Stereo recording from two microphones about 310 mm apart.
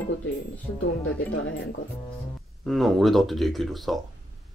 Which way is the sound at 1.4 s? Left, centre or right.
Left.